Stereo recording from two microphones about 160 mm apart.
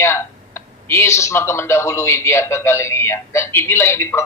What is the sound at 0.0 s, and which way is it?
Speech, 15° left (ahead or behind).